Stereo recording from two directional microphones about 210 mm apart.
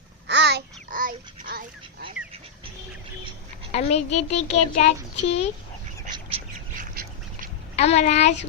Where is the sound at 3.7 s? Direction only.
30° left (ahead or behind).